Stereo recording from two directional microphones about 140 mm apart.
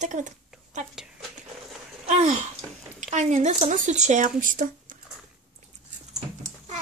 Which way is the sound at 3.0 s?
60° right (ahead or behind).